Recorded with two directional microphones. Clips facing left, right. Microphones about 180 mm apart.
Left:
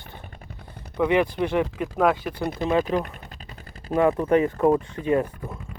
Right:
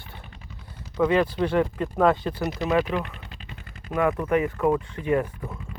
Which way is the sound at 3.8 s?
30° left (ahead or behind).